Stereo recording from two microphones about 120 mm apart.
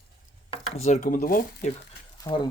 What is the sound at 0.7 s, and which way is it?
Speech, 75° left (ahead or behind).